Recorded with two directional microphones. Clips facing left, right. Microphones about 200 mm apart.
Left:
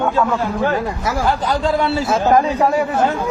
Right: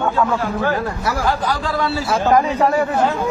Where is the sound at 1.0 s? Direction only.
25° left (ahead or behind).